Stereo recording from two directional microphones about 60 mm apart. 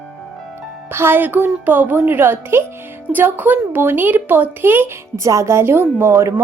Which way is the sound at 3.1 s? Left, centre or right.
Right.